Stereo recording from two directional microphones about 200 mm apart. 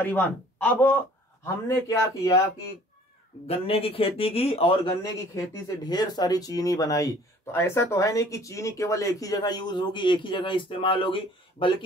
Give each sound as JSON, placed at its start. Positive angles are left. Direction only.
{"t": 0.0, "sound": "speech", "side_deg": 10}
{"t": 3.4, "sound": "a man's voice", "side_deg": 30}
{"t": 5.3, "sound": "speech", "side_deg": 15}